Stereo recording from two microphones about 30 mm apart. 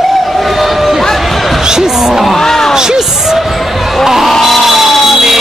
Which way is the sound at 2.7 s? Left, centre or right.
Right.